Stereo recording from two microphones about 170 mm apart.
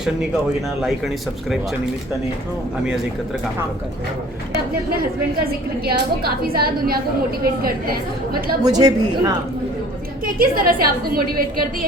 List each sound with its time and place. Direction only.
0.8 s speech: centre (ahead or behind)
5.4 s a woman's voice: 65° right (ahead or behind)
8.6 s a woman's voice: 20° right (ahead or behind)
10.2 s a woman's voice: 55° right (ahead or behind)